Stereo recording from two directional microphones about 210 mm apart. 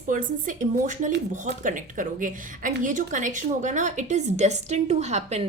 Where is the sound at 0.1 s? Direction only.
40° right (ahead or behind).